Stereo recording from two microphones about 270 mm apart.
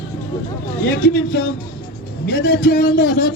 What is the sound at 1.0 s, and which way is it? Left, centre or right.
A man's voice, left.